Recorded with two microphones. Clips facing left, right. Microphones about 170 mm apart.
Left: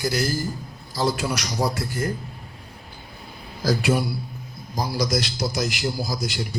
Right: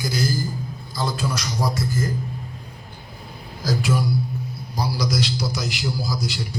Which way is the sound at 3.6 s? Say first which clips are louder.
Left 2 dB; 65° left (ahead or behind).